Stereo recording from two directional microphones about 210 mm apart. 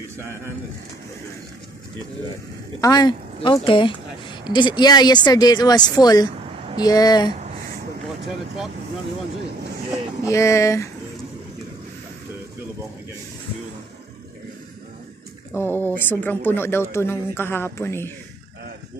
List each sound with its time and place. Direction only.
2.8 s a woman's voice: 20° left (ahead or behind)
10.2 s speech: 15° left (ahead or behind)
15.5 s speech: 10° left (ahead or behind)